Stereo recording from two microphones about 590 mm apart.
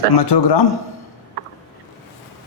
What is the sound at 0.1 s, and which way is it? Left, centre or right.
Speech, left.